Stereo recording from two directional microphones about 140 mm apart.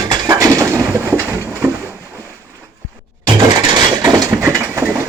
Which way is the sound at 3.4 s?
30° right (ahead or behind).